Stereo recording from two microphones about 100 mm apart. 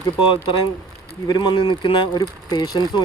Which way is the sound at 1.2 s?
45° left (ahead or behind).